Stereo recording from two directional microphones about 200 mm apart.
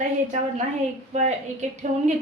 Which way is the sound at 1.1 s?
35° right (ahead or behind).